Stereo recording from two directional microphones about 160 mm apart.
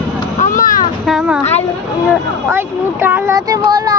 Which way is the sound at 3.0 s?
10° right (ahead or behind).